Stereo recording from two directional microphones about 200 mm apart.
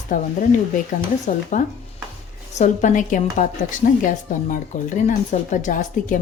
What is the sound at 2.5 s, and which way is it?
A woman's voice, 40° left (ahead or behind).